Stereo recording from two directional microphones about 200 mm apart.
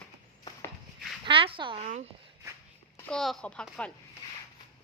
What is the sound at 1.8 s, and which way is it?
Speech, 35° right (ahead or behind).